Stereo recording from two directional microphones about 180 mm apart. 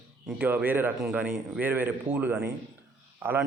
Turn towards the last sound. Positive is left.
turn(degrees=-10)  # may be behind; listen again after turning